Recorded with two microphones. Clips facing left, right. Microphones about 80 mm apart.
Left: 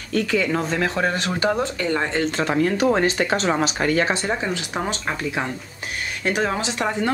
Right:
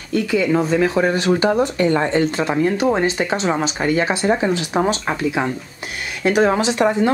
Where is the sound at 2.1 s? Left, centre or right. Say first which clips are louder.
Right 3 dB; centre.